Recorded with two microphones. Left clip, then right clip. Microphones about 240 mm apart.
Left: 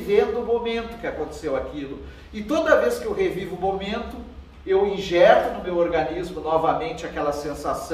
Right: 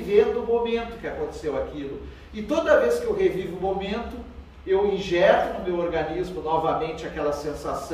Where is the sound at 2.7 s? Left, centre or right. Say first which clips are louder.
Left 1 dB; centre.